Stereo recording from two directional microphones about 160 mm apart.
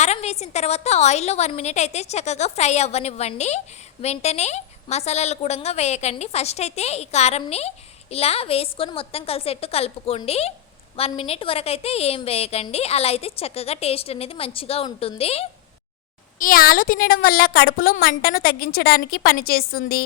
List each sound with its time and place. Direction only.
0.0 s a woman's voice: 45° left (ahead or behind)
16.4 s a woman's voice: 60° left (ahead or behind)